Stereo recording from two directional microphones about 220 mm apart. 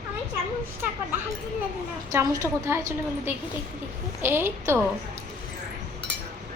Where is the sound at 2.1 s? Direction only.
10° right (ahead or behind).